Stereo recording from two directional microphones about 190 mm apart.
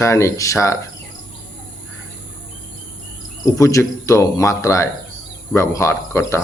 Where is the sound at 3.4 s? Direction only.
15° left (ahead or behind).